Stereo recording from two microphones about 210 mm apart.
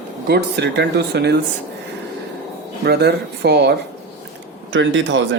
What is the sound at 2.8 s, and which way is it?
Speech, 50° right (ahead or behind).